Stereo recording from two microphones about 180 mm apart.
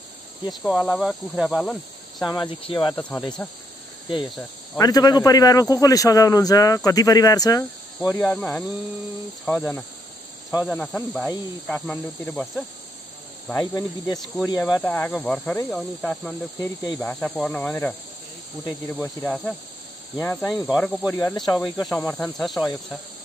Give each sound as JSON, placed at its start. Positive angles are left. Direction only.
{"t": 0.5, "sound": "cricket", "side_deg": 0}
{"t": 2.2, "sound": "a man's voice", "side_deg": 25}
{"t": 4.7, "sound": "a man's voice", "side_deg": 20}
{"t": 8.2, "sound": "speech", "side_deg": 10}
{"t": 14.8, "sound": "cricket", "side_deg": 5}
{"t": 17.0, "sound": "speech", "side_deg": 5}
{"t": 20.3, "sound": "cricket", "side_deg": 0}
{"t": 21.0, "sound": "a man's voice", "side_deg": 15}
{"t": 21.9, "sound": "cricket", "side_deg": 10}